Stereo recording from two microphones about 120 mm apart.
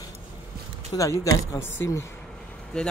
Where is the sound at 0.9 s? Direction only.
25° left (ahead or behind).